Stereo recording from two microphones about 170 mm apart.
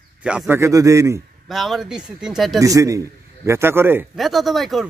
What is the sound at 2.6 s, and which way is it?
A man's voice, 20° right (ahead or behind).